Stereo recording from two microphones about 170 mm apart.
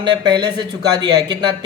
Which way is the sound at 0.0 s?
25° right (ahead or behind).